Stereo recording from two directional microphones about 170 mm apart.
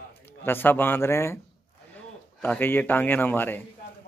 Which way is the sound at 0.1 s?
15° left (ahead or behind).